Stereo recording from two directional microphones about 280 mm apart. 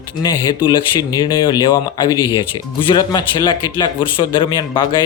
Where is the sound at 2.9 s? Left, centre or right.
Centre.